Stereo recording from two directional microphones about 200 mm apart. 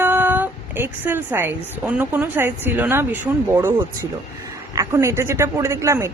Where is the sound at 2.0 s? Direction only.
10° right (ahead or behind).